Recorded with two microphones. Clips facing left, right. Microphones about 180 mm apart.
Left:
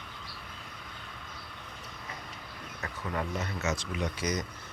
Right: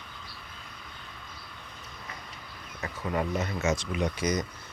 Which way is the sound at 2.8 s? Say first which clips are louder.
Right 4 dB; 15° right (ahead or behind).